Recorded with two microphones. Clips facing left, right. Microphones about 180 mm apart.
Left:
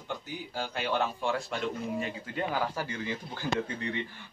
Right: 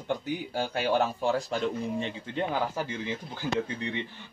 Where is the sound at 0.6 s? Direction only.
45° right (ahead or behind).